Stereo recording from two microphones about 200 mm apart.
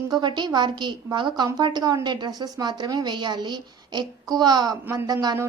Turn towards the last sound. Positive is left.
turn(degrees=-15)  # may be behind; listen again after turning